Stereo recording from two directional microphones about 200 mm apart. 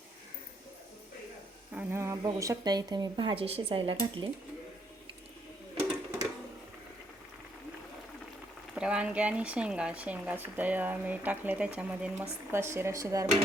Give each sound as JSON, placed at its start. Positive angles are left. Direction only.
{"t": 1.7, "sound": "a woman's voice", "side_deg": -10}
{"t": 8.7, "sound": "speech", "side_deg": -5}